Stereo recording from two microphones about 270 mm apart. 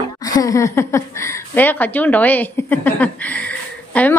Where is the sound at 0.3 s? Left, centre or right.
Centre.